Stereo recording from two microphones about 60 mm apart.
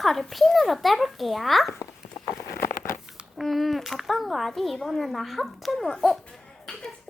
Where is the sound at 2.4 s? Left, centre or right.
Left.